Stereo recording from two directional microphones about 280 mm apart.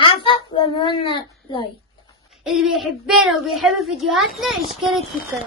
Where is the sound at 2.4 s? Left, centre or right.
Centre.